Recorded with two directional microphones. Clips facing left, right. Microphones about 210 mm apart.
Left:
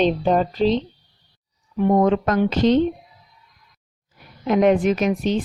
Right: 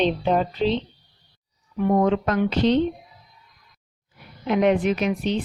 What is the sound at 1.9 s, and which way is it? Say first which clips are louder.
Speech: left 2 dB; 45° left (ahead or behind).